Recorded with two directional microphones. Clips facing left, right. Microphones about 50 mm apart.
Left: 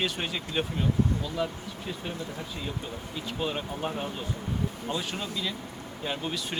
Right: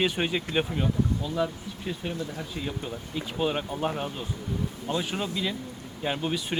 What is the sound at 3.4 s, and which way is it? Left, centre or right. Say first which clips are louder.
Speech: right 4 dB; centre.